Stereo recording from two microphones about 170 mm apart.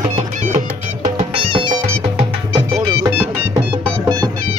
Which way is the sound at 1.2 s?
30° right (ahead or behind).